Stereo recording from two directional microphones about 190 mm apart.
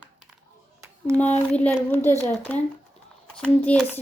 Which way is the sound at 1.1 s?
5° left (ahead or behind).